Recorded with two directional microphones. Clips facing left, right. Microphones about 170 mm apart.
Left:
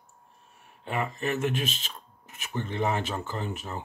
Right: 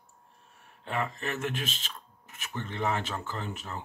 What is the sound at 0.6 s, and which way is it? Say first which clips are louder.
Speech: left 2 dB; 10° left (ahead or behind).